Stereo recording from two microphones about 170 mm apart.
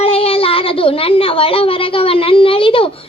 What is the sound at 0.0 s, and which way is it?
A child's voice, 35° left (ahead or behind).